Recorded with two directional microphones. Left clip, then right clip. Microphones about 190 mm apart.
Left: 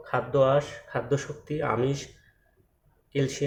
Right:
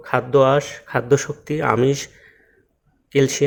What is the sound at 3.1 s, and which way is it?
Speech, 45° right (ahead or behind).